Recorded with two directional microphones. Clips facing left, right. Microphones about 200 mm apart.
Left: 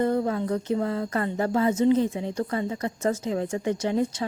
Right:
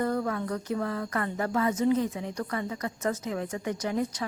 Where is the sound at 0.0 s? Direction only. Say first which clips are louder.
Left 4 dB; 25° left (ahead or behind).